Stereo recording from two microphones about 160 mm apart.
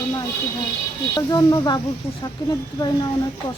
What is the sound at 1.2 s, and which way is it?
Speech, 25° left (ahead or behind).